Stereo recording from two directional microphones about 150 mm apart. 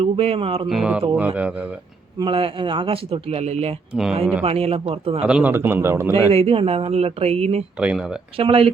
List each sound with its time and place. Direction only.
0.0 s speech: 40° right (ahead or behind)
0.7 s a man's voice: 5° right (ahead or behind)
2.1 s speech: 35° right (ahead or behind)
5.2 s a man's voice: 10° right (ahead or behind)
6.3 s speech: 40° right (ahead or behind)
7.8 s speech: 5° right (ahead or behind)
8.4 s speech: 40° right (ahead or behind)